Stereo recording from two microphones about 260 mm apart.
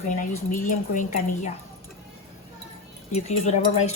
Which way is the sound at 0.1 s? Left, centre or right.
Left.